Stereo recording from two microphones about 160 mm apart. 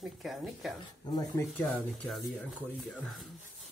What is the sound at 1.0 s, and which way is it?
Speech, 25° left (ahead or behind).